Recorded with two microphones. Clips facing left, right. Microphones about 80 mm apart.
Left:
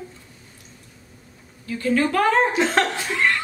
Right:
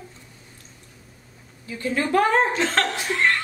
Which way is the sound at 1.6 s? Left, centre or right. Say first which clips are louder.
Left 4 dB; right.